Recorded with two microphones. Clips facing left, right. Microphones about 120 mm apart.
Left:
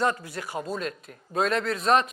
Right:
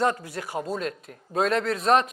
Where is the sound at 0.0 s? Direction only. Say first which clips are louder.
Right 2 dB; 55° right (ahead or behind).